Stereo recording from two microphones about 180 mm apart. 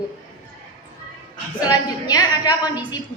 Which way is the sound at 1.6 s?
20° left (ahead or behind).